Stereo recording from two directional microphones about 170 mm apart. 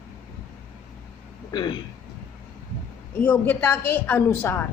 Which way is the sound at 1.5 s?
25° left (ahead or behind).